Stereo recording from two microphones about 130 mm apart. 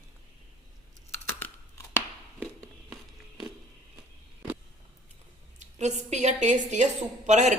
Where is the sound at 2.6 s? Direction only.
Centre (ahead or behind).